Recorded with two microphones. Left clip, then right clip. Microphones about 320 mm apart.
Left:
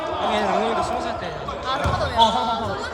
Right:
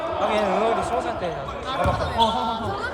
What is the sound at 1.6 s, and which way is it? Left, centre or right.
Basketball bounce, left.